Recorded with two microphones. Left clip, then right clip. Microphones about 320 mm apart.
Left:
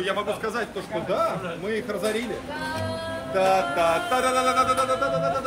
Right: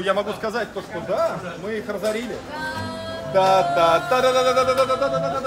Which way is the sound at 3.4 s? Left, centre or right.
Right.